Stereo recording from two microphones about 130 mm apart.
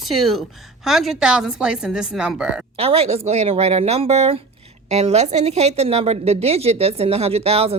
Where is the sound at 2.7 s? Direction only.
50° right (ahead or behind).